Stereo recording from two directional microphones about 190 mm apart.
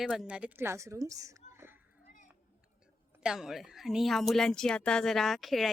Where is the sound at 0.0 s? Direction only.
Centre (ahead or behind).